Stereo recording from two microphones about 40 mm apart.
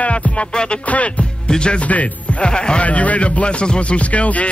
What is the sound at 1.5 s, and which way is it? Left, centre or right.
Speech, left.